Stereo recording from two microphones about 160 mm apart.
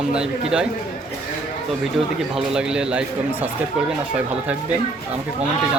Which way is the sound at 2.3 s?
5° right (ahead or behind).